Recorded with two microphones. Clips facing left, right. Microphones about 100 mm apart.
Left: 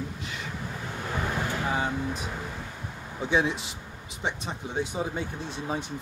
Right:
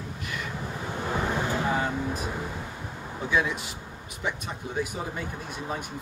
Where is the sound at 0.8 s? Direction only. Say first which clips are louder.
Right 3 dB; 20° right (ahead or behind).